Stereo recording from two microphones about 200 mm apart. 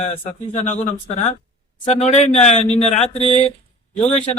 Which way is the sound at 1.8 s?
30° left (ahead or behind).